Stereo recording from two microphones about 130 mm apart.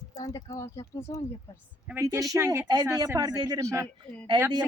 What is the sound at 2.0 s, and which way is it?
Speech, 25° right (ahead or behind).